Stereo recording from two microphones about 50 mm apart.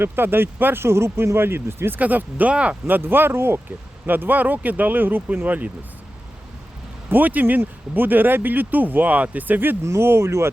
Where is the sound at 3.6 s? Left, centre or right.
Right.